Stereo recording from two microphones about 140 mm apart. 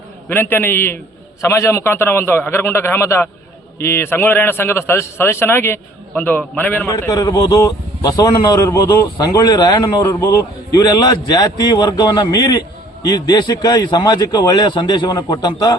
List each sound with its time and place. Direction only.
0.3 s a man's voice: 15° left (ahead or behind)
6.8 s a man's voice: 25° left (ahead or behind)